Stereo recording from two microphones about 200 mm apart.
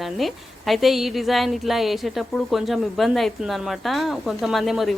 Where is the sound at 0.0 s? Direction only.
Centre (ahead or behind).